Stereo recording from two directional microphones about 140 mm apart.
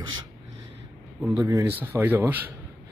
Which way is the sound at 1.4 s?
25° right (ahead or behind).